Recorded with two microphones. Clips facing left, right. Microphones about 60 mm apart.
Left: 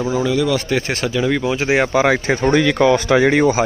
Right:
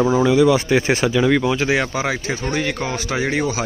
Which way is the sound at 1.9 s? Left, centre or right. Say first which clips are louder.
Left 7 dB; left.